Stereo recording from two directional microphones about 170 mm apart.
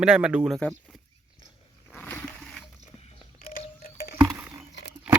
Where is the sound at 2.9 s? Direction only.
35° left (ahead or behind).